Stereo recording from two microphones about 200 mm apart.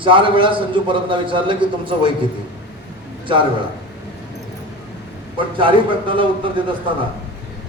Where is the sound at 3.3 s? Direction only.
25° right (ahead or behind).